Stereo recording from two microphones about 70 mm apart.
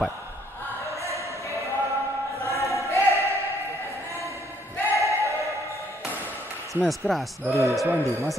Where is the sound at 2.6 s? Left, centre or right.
Right.